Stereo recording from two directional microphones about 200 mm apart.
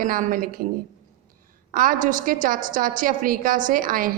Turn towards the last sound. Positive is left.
turn(degrees=-45)  # may be behind; listen again after turning